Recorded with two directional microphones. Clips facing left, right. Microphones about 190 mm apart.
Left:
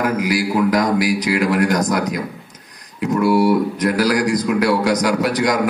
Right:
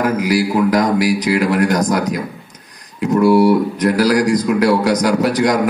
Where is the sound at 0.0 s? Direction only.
40° right (ahead or behind).